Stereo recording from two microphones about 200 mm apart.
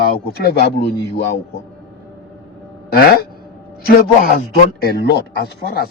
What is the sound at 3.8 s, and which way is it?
A man's voice, 50° left (ahead or behind).